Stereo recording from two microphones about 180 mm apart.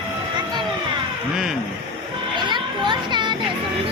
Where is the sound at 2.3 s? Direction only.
25° right (ahead or behind).